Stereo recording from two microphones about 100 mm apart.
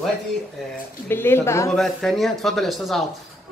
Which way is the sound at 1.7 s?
5° left (ahead or behind).